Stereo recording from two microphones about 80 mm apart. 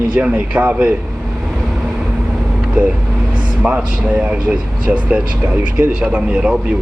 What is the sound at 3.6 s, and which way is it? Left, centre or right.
Speech, centre.